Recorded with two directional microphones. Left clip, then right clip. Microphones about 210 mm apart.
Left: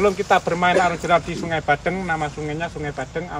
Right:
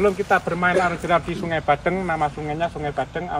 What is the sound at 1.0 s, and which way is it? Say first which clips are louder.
Speech: left 2 dB; 5° left (ahead or behind).